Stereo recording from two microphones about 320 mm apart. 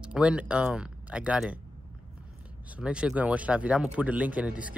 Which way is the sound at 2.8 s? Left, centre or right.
Centre.